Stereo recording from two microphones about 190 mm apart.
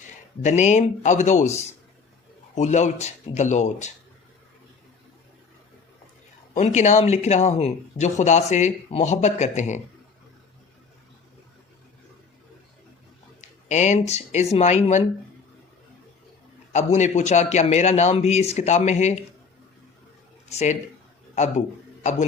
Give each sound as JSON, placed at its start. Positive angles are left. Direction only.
{"t": 0.4, "sound": "speech", "side_deg": 40}
{"t": 2.6, "sound": "speech", "side_deg": 40}
{"t": 6.5, "sound": "speech", "side_deg": 40}
{"t": 13.7, "sound": "speech", "side_deg": 40}
{"t": 16.7, "sound": "speech", "side_deg": 40}
{"t": 20.5, "sound": "speech", "side_deg": 35}